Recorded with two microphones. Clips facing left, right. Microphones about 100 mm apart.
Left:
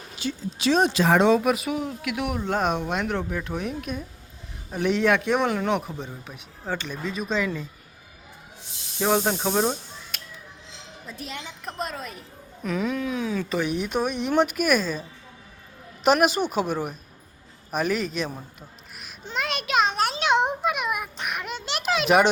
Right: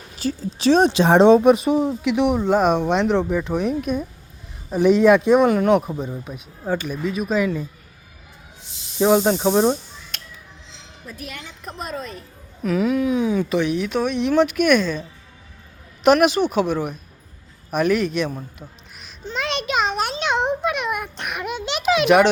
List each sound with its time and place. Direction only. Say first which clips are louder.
0.2 s speech: right 5 dB; 35° right (ahead or behind)
2.2 s speech: right 7 dB; 20° right (ahead or behind)
9.0 s speech: right 6 dB; 10° right (ahead or behind)
10.1 s music: right 4 dB; 5° left (ahead or behind)
11.0 s a woman's voice: right 1 dB; 25° left (ahead or behind)
11.6 s a man's voice: right 3 dB; centre (ahead or behind); by 13.5 s 20° right (ahead or behind)
13.8 s a man's voice: right 4 dB; 10° left (ahead or behind)
16.0 s a man's voice: right 5 dB; centre (ahead or behind)
18.9 s a sound: right 2 dB; 10° left (ahead or behind)